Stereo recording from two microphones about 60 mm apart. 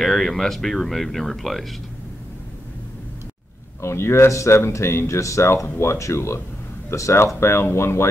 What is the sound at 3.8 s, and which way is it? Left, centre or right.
Speech, left.